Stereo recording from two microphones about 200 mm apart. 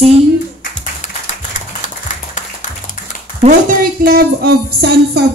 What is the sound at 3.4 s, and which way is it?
Speech, 40° right (ahead or behind).